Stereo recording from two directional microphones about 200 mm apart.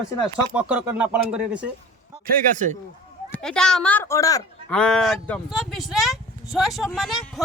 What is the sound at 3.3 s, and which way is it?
Speech, 5° left (ahead or behind).